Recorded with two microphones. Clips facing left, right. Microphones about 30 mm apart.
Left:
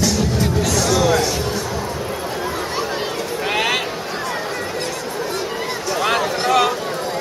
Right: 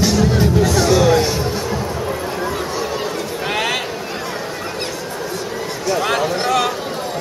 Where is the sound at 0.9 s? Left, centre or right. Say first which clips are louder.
Right 2 dB; centre.